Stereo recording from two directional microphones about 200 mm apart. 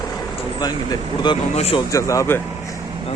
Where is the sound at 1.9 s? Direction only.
15° left (ahead or behind).